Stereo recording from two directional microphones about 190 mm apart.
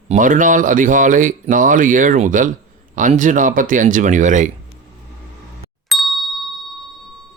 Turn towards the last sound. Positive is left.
turn(degrees=0)  # may be behind; listen again after turning